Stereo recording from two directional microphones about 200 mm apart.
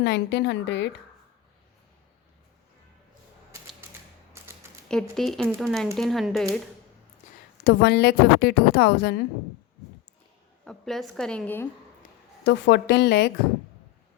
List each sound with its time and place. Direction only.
0.0 s a woman's voice: 60° left (ahead or behind)
4.9 s a woman's voice: centre (ahead or behind)
7.6 s a woman's voice: 55° left (ahead or behind)
10.7 s a woman's voice: centre (ahead or behind)
12.5 s a woman's voice: 60° left (ahead or behind)